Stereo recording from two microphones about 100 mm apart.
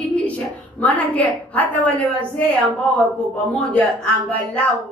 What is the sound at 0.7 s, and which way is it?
A woman's voice, 15° left (ahead or behind).